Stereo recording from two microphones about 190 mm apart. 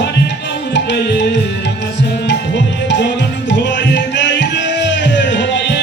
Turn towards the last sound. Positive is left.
turn(degrees=65)  # may be behind; listen again after turning